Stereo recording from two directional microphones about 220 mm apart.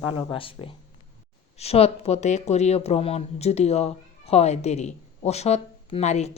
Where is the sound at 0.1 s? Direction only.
25° left (ahead or behind).